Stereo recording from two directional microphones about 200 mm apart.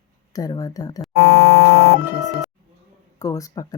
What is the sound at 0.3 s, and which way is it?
Speech, 20° left (ahead or behind).